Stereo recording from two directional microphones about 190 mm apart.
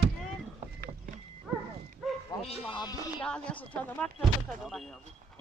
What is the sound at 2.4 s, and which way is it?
Speech, 25° left (ahead or behind).